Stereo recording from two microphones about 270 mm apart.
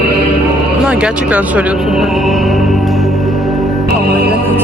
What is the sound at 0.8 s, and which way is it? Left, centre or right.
A woman's voice, centre.